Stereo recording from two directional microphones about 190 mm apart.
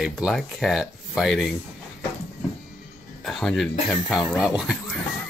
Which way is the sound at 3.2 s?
Centre (ahead or behind).